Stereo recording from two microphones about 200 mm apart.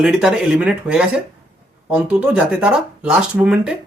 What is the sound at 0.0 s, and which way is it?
Speech, 5° right (ahead or behind).